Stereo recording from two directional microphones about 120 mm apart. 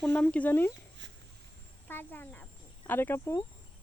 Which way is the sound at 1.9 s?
15° left (ahead or behind).